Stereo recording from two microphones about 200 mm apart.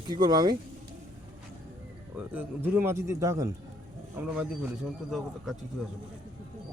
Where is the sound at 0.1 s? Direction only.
20° right (ahead or behind).